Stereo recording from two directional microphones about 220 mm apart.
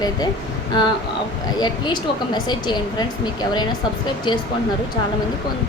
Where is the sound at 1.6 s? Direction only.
20° left (ahead or behind).